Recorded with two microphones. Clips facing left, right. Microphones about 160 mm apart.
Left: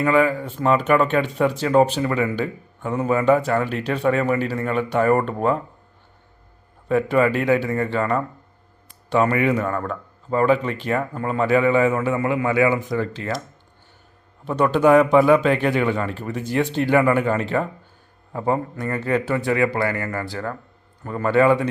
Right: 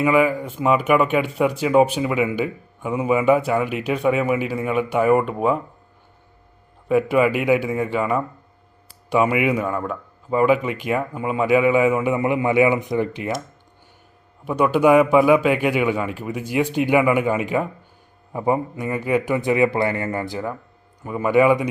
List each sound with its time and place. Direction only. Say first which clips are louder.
0.0 s speech: right 1 dB; 10° right (ahead or behind)
6.8 s speech: right 1 dB; 10° right (ahead or behind)
14.4 s speech: even; 10° right (ahead or behind)